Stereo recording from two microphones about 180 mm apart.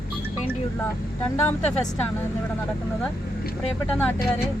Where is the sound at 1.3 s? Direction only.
10° left (ahead or behind).